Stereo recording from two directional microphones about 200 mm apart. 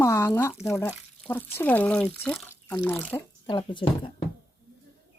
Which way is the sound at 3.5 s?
25° left (ahead or behind).